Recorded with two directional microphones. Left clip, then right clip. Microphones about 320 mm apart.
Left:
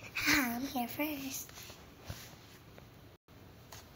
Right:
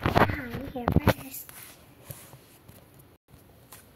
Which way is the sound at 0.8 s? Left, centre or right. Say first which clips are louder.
Right 10 dB; centre.